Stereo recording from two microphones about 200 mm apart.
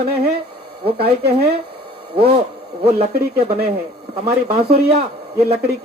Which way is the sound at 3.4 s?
30° right (ahead or behind).